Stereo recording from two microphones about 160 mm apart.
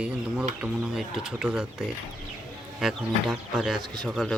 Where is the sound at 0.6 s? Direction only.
5° right (ahead or behind).